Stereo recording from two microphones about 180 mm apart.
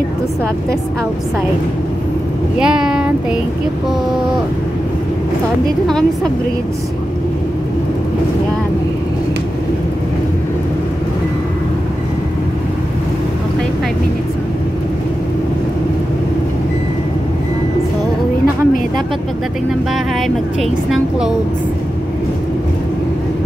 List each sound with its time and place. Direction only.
2.6 s speech: 5° right (ahead or behind)